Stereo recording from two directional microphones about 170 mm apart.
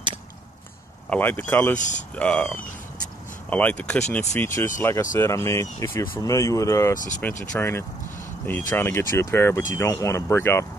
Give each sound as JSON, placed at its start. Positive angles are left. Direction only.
{"t": 1.1, "sound": "speech", "side_deg": 10}
{"t": 1.8, "sound": "speech", "side_deg": 45}
{"t": 2.1, "sound": "speech", "side_deg": 10}